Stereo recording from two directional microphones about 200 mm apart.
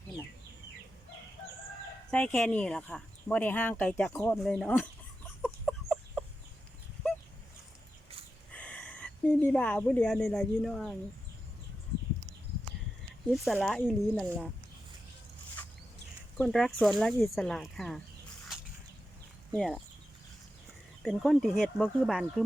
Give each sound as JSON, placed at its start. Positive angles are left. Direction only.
{"t": 2.0, "sound": "speech", "side_deg": 5}
{"t": 5.6, "sound": "chicken", "side_deg": 5}
{"t": 8.5, "sound": "speech", "side_deg": 5}
{"t": 13.3, "sound": "speech", "side_deg": 0}
{"t": 16.4, "sound": "speech", "side_deg": 0}
{"t": 19.5, "sound": "speech", "side_deg": 0}
{"t": 21.0, "sound": "speech", "side_deg": 0}